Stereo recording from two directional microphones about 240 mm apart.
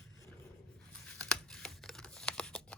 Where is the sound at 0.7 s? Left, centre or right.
Centre.